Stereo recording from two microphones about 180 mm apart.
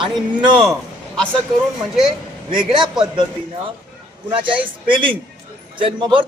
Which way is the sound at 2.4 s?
25° right (ahead or behind).